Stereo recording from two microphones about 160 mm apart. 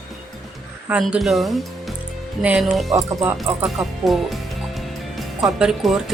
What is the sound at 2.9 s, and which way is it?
Speech, 15° right (ahead or behind).